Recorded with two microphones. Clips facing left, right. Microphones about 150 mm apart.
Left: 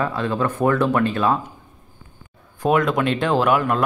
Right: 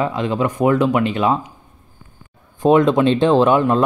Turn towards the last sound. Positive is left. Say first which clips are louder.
# right 4 dB
turn(degrees=-25)  # may be behind; listen again after turning